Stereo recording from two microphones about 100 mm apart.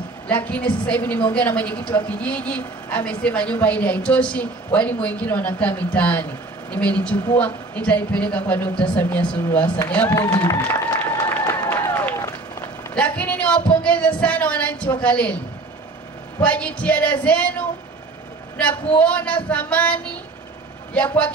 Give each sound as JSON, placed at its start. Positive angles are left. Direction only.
{"t": 0.3, "sound": "a woman's voice", "side_deg": 15}
{"t": 10.3, "sound": "speech", "side_deg": 40}
{"t": 10.7, "sound": "applause", "side_deg": 25}
{"t": 11.9, "sound": "run", "side_deg": 20}
{"t": 12.9, "sound": "a woman's voice", "side_deg": 15}
{"t": 16.4, "sound": "a woman's voice", "side_deg": 15}